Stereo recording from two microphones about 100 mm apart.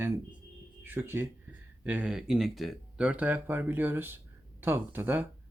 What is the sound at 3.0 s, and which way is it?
Speech, 15° right (ahead or behind).